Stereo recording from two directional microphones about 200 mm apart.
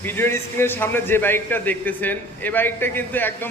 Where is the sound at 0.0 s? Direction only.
10° left (ahead or behind).